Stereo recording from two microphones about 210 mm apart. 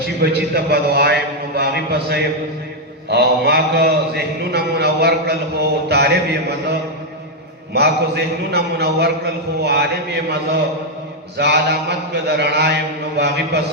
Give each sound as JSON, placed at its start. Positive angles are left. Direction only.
{"t": 0.2, "sound": "a man's voice", "side_deg": -50}
{"t": 7.7, "sound": "a man's voice", "side_deg": -50}